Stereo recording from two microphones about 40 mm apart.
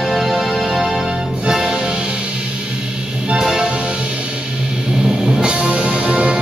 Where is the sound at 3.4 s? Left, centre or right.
Centre.